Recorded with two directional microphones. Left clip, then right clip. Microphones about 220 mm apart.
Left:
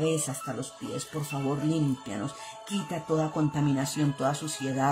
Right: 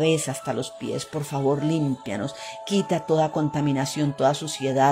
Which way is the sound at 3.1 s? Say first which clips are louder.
Right 4 dB; 15° right (ahead or behind).